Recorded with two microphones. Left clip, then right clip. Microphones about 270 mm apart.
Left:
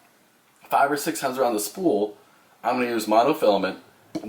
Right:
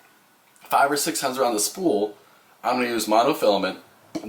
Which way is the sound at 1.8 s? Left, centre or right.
Left.